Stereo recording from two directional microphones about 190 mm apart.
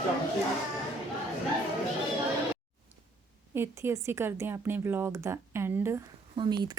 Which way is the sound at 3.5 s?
15° right (ahead or behind).